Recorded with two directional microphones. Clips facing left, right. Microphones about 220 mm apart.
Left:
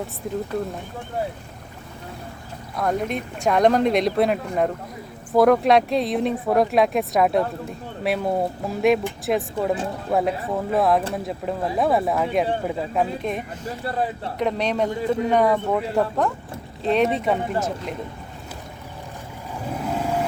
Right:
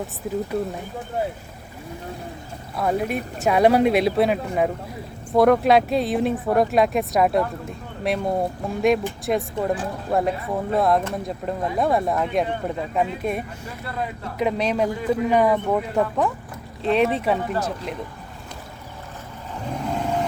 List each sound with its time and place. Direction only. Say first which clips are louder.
0.2 s speech: right 1 dB; 5° right (ahead or behind)
2.7 s speech: right 1 dB; 5° right (ahead or behind)
13.7 s speech: left 9 dB; 35° left (ahead or behind)
14.3 s speech: right 1 dB; 5° right (ahead or behind)
14.8 s speech: even; 25° left (ahead or behind)
15.3 s speech: right 1 dB; 5° right (ahead or behind)
19.6 s vehicle: even; 5° left (ahead or behind)